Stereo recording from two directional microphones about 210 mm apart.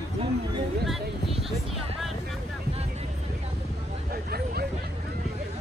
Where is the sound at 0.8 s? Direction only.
Centre (ahead or behind).